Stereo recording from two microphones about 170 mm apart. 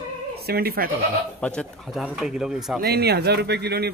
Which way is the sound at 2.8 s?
70° right (ahead or behind).